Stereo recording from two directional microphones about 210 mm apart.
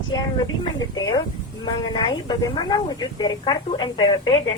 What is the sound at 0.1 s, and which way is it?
Speech, 20° left (ahead or behind).